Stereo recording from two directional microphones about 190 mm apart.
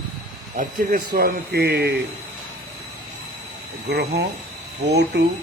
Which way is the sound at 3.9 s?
60° right (ahead or behind).